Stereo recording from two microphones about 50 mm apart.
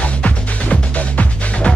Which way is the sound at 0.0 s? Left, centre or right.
Left.